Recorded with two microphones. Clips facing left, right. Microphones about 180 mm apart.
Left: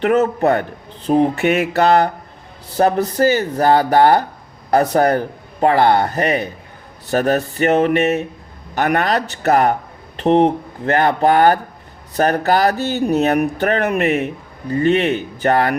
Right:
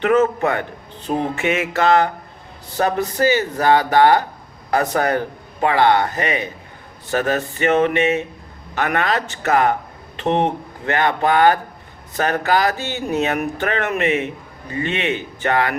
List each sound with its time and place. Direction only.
0.1 s speech: 35° left (ahead or behind)